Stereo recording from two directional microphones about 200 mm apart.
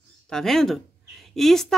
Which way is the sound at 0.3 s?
Centre (ahead or behind).